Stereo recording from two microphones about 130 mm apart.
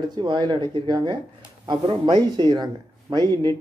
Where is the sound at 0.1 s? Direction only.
35° right (ahead or behind).